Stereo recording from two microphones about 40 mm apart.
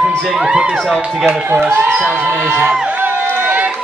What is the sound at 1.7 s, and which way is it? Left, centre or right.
Speech, right.